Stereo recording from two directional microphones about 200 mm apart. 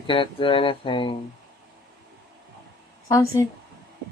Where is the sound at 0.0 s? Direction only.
25° left (ahead or behind).